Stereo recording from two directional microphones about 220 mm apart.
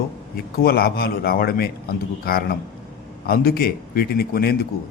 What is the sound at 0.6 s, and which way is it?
Speech, 45° left (ahead or behind).